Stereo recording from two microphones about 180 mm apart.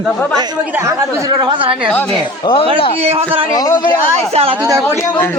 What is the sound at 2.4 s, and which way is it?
Speech, 30° left (ahead or behind).